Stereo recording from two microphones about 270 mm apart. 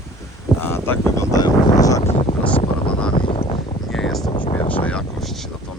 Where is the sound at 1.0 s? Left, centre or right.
Centre.